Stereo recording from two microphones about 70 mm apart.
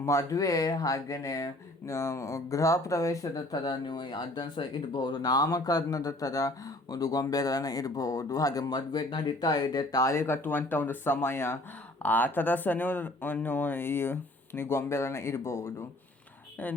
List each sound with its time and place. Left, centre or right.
0.0 s speech: left
1.9 s speech: left
3.5 s speech: left